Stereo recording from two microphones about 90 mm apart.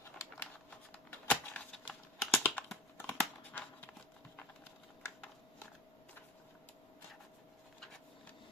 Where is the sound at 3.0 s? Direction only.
20° left (ahead or behind).